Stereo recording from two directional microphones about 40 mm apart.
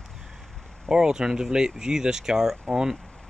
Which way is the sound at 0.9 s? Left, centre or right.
Centre.